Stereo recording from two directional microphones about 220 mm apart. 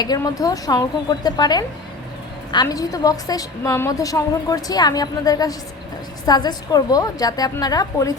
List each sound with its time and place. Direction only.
0.0 s a woman's voice: 15° left (ahead or behind)